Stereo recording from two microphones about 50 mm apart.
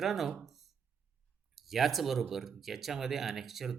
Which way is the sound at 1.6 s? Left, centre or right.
Centre.